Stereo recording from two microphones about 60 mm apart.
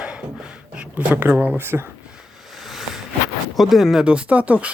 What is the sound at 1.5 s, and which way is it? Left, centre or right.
Speech, right.